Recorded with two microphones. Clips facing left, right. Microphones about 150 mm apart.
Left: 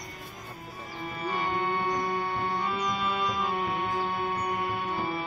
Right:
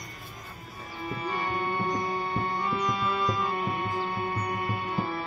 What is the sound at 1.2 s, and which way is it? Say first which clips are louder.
Music: left 2 dB; 10° left (ahead or behind).